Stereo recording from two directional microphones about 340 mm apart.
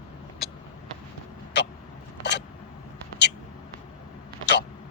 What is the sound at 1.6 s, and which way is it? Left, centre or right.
Vehicle, left.